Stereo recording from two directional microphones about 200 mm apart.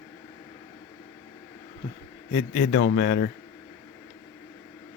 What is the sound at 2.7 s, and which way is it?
Speech, 55° left (ahead or behind).